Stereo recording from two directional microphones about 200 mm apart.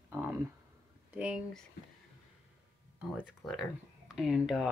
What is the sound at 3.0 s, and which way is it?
Speech, 5° right (ahead or behind).